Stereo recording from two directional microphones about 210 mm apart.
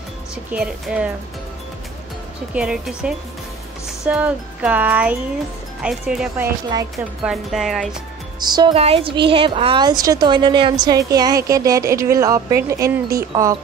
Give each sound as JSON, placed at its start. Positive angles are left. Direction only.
{"t": 0.5, "sound": "music", "side_deg": -5}
{"t": 2.5, "sound": "music", "side_deg": -5}
{"t": 5.8, "sound": "speech", "side_deg": -5}
{"t": 7.2, "sound": "music", "side_deg": 0}
{"t": 8.4, "sound": "a woman's voice", "side_deg": -20}